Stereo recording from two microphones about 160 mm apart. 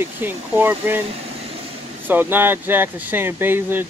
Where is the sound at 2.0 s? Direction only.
10° right (ahead or behind).